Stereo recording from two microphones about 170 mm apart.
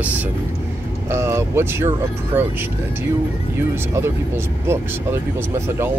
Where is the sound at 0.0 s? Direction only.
10° right (ahead or behind).